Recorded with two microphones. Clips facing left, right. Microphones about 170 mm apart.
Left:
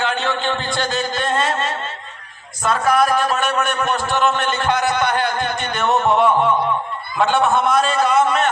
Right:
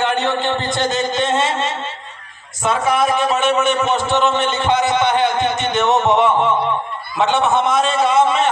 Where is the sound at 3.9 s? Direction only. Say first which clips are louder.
Right 2 dB; 20° right (ahead or behind).